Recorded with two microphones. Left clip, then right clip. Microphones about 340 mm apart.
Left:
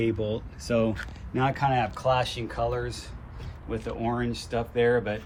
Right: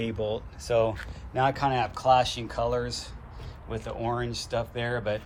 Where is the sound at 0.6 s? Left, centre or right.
Centre.